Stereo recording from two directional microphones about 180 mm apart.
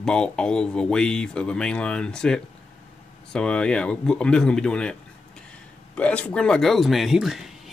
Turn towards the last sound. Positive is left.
turn(degrees=0)  # may be behind; listen again after turning